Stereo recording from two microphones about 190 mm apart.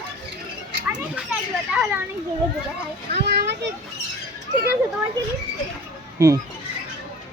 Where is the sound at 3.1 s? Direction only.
65° right (ahead or behind).